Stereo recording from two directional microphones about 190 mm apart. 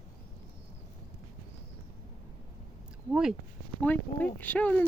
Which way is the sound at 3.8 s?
10° left (ahead or behind).